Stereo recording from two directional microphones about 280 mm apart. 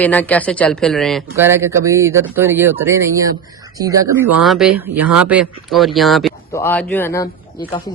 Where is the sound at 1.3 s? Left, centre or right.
Centre.